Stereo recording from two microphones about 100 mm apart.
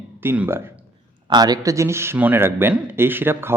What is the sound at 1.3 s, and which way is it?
Speech, 40° right (ahead or behind).